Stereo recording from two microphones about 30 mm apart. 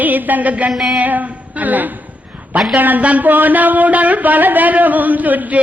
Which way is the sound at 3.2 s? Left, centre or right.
Right.